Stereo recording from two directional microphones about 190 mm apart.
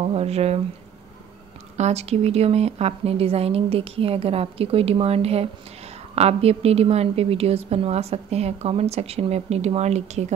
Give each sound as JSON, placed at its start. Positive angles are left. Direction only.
{"t": 0.0, "sound": "a woman's voice", "side_deg": -35}
{"t": 1.8, "sound": "a woman's voice", "side_deg": -35}